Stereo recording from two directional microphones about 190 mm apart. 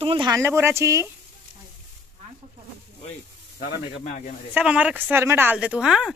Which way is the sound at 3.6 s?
45° left (ahead or behind).